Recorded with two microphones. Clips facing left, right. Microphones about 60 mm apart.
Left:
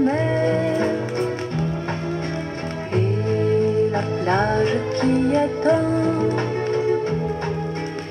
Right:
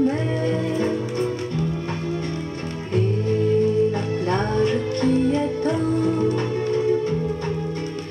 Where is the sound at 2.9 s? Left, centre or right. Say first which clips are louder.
Even; left.